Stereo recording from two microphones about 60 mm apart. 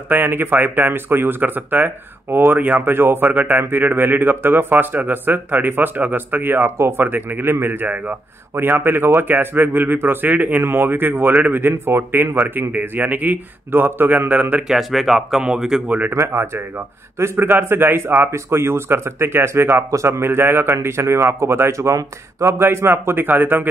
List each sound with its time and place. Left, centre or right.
0.1 s speech: right
14.7 s speech: centre
16.1 s a man's voice: right